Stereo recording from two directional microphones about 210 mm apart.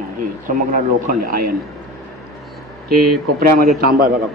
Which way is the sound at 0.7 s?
40° right (ahead or behind).